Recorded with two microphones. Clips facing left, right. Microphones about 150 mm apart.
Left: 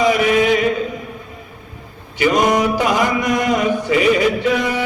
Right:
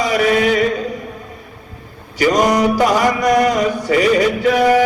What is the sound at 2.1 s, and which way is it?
Mantra, 40° right (ahead or behind).